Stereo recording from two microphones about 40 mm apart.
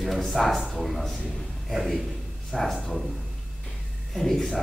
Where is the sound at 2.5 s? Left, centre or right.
Centre.